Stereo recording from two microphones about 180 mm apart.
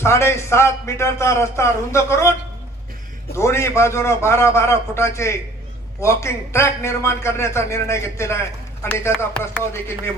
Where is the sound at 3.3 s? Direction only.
15° left (ahead or behind).